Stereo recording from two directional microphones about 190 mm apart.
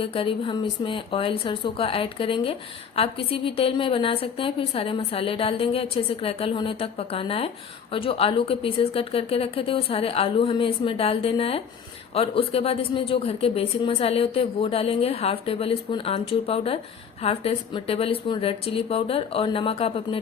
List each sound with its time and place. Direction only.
0.0 s speech: 30° left (ahead or behind)